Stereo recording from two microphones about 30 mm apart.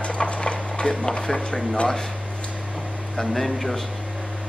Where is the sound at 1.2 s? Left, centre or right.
Centre.